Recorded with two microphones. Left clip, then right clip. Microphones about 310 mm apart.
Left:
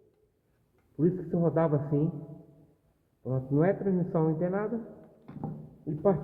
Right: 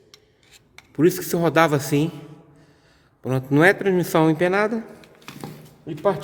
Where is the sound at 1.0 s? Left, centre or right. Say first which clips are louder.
Right 10 dB; right.